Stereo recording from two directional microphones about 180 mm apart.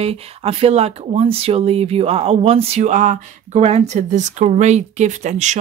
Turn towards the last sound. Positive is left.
turn(degrees=-40)  # may be behind; listen again after turning